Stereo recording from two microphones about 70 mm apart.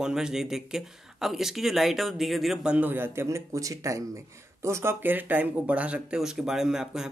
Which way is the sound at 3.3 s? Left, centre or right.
Right.